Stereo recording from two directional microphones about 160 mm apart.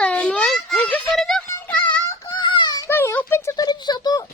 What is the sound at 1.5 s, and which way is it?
Music, 10° left (ahead or behind).